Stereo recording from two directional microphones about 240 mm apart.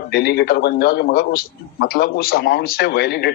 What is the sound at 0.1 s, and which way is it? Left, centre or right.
Speech, left.